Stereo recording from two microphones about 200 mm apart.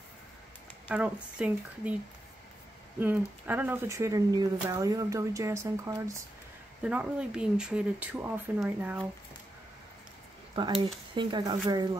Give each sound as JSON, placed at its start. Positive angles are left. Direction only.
{"t": 0.8, "sound": "speech", "side_deg": -5}
{"t": 3.0, "sound": "speech", "side_deg": -10}
{"t": 10.5, "sound": "speech", "side_deg": -25}